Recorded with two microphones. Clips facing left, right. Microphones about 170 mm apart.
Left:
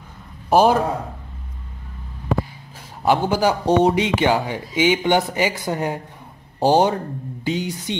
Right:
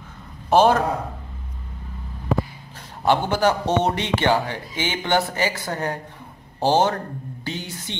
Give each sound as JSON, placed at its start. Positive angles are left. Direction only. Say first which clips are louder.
{"t": 0.5, "sound": "a man's voice", "louder": "left 1 dB", "side_deg": 10}
{"t": 3.1, "sound": "a man's voice", "louder": "left 1 dB", "side_deg": 10}